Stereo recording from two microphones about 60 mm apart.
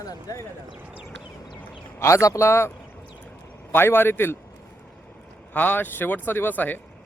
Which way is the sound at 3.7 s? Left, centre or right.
Left.